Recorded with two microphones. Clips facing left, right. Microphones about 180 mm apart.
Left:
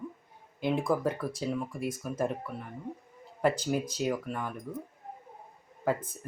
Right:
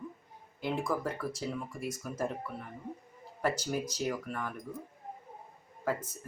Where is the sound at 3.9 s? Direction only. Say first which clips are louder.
Left 3 dB; 20° left (ahead or behind).